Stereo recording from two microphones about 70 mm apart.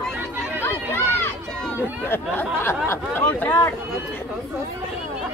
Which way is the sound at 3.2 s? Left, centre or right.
Left.